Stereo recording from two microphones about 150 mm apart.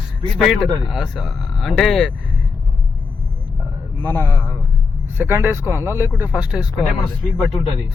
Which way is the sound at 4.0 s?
15° left (ahead or behind).